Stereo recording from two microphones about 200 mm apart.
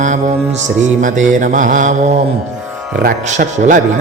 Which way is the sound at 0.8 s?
40° right (ahead or behind).